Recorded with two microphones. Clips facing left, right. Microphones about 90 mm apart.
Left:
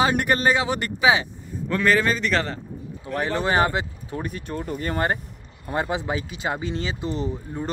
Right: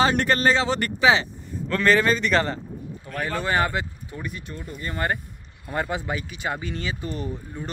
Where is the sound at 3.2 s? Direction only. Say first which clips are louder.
Left 2 dB; 25° left (ahead or behind).